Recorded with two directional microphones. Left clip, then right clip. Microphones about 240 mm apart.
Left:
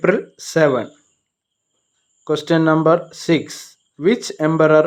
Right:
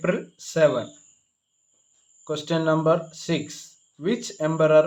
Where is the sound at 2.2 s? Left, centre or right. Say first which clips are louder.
Left 8 dB; left.